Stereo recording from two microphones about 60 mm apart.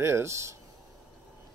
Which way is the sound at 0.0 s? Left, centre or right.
Right.